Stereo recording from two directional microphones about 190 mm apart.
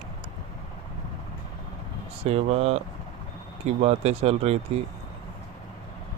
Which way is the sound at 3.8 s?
35° right (ahead or behind).